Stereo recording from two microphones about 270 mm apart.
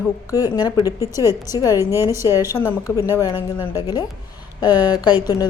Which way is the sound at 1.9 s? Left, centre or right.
Centre.